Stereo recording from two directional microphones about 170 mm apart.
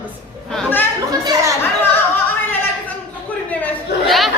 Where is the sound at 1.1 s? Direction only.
20° right (ahead or behind).